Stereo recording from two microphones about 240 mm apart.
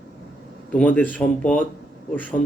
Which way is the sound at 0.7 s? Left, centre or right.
Centre.